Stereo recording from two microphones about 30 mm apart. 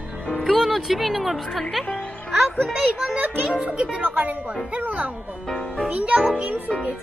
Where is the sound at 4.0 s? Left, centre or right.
Right.